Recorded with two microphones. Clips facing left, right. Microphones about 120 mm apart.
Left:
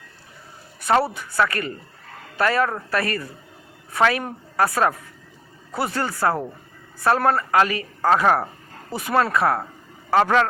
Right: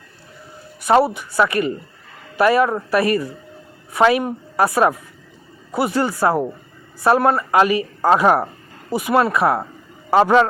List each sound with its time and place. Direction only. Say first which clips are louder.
0.8 s a woman's voice: right 5 dB; 15° right (ahead or behind)
4.2 s a woman's voice: right 4 dB; 10° right (ahead or behind)